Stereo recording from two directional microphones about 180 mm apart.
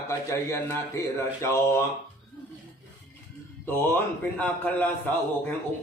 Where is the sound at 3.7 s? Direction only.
10° left (ahead or behind).